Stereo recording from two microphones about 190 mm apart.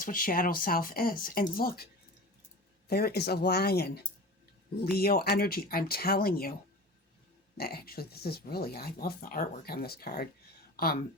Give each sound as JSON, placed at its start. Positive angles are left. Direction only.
{"t": 0.0, "sound": "speech", "side_deg": 45}
{"t": 7.6, "sound": "speech", "side_deg": 55}